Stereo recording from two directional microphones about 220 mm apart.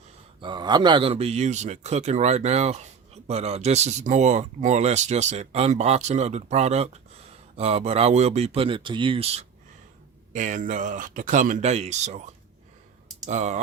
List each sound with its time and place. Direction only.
0.4 s a man's voice: 20° right (ahead or behind)